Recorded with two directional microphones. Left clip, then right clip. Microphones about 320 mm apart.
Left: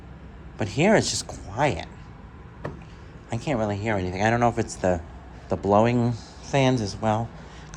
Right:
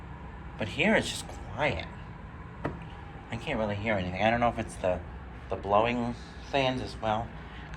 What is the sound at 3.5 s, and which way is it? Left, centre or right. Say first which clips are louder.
Speech: left 4 dB; left.